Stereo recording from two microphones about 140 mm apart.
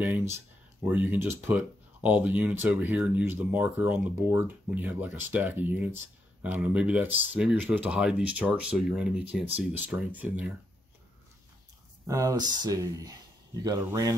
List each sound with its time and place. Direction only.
0.0 s speech: 20° right (ahead or behind)
12.1 s speech: 25° right (ahead or behind)